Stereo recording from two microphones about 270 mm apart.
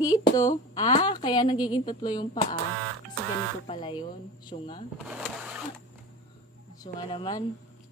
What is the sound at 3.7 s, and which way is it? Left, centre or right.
Speech, centre.